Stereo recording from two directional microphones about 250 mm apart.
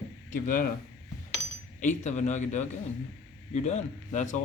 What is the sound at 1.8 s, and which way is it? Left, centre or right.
Speech, left.